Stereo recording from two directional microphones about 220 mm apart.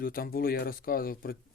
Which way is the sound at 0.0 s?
40° left (ahead or behind).